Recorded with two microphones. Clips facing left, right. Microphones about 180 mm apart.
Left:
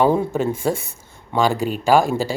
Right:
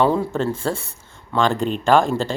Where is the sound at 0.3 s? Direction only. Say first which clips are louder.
Left 2 dB; 15° left (ahead or behind).